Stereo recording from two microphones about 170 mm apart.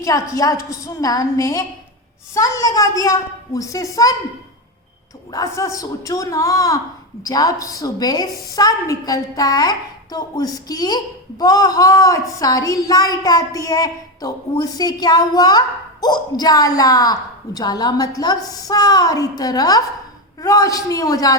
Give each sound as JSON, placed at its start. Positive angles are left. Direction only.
{"t": 0.0, "sound": "a woman's voice", "side_deg": 20}
{"t": 5.3, "sound": "a woman's voice", "side_deg": 20}